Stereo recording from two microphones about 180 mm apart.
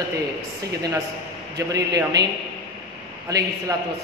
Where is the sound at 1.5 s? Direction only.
20° right (ahead or behind).